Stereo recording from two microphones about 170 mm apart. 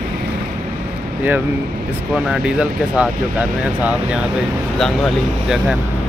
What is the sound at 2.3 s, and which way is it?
Speech, 5° right (ahead or behind).